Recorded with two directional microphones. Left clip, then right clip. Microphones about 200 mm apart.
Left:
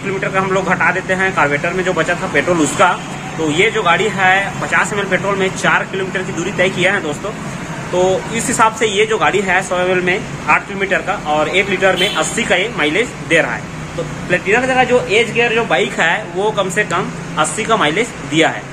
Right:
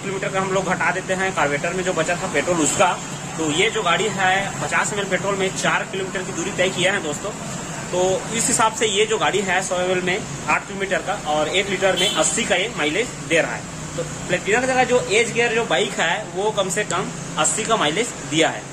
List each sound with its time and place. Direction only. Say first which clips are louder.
0.2 s a man's voice: left 5 dB; 10° right (ahead or behind)
8.5 s a man's voice: left 6 dB; 15° right (ahead or behind)